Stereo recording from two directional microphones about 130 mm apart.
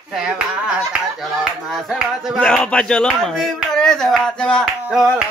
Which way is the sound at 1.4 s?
5° right (ahead or behind).